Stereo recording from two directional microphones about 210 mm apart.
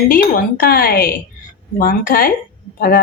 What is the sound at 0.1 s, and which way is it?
A woman's voice, 45° left (ahead or behind).